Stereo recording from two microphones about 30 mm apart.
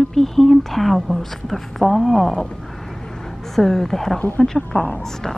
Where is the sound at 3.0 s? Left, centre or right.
Centre.